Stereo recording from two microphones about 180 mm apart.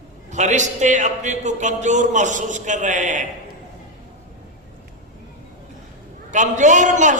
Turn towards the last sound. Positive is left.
turn(degrees=-45)  # may be behind; listen again after turning